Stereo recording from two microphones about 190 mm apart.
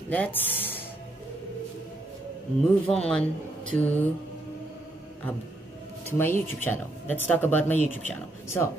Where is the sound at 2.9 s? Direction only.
5° left (ahead or behind).